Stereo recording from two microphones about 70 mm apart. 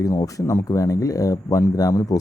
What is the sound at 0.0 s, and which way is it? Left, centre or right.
Speech, left.